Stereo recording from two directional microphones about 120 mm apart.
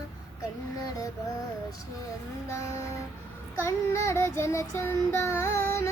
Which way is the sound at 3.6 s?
25° left (ahead or behind).